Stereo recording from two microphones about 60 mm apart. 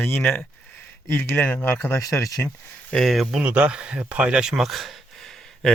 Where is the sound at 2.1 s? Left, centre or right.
Left.